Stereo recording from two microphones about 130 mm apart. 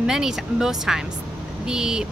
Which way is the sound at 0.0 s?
5° right (ahead or behind).